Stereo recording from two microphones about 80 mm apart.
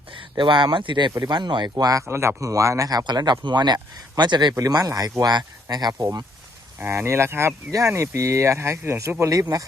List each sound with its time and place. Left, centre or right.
0.3 s speech: right
1.8 s speech: right
2.0 s speech: right
3.0 s speech: right
4.7 s speech: right
5.7 s speech: right
6.7 s speech: right